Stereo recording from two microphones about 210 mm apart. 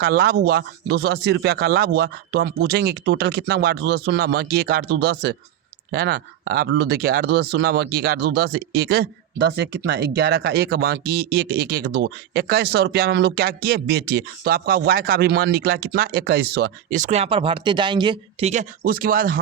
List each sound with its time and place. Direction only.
0.0 s speech: 50° right (ahead or behind); by 18.6 s 30° right (ahead or behind)
18.8 s speech: 45° right (ahead or behind)